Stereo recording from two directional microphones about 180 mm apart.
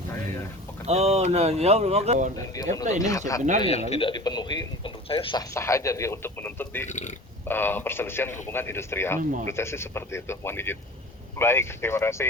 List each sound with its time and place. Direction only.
0.9 s speech: 35° right (ahead or behind)
3.0 s a man's voice: 20° left (ahead or behind)
3.6 s a man's voice: 35° left (ahead or behind)
5.5 s speech: 15° left (ahead or behind)
6.8 s speech: 40° left (ahead or behind)
7.4 s speech: 10° left (ahead or behind)